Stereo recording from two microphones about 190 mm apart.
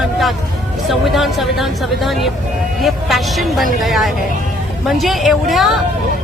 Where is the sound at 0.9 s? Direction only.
Centre (ahead or behind).